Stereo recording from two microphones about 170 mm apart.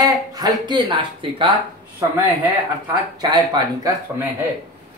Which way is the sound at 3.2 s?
25° right (ahead or behind).